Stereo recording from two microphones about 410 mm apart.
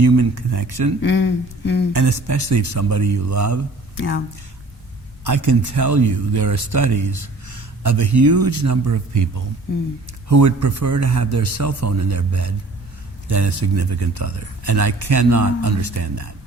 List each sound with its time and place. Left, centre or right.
0.0 s speech: right
1.0 s a sound: left
1.9 s speech: right
3.9 s speech: left
5.2 s a man's voice: right